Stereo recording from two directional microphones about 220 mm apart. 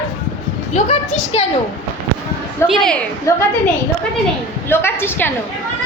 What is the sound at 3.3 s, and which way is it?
Speech, 15° left (ahead or behind).